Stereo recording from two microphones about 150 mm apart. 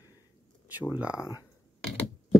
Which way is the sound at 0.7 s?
5° right (ahead or behind).